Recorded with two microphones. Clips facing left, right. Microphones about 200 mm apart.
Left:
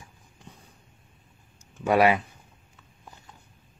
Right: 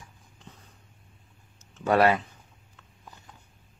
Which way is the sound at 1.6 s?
10° left (ahead or behind).